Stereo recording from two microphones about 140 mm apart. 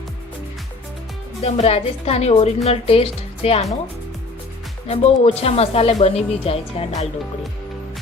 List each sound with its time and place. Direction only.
1.4 s speech: 45° left (ahead or behind)
4.9 s speech: 50° left (ahead or behind)